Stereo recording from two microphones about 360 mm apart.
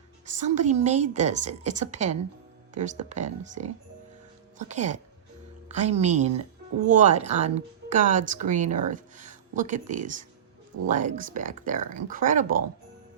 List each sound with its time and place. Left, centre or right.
0.3 s speech: centre